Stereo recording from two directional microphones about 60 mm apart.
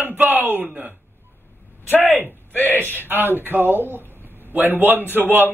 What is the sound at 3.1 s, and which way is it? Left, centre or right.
A man's voice, right.